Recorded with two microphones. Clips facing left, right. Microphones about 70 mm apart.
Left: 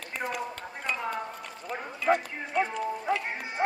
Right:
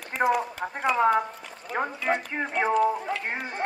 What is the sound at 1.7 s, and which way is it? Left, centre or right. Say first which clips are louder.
Speech: right 8 dB; centre.